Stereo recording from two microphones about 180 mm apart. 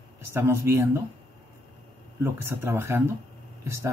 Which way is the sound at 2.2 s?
15° right (ahead or behind).